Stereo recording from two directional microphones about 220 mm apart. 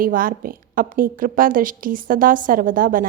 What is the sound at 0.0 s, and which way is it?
A woman's voice, 40° right (ahead or behind).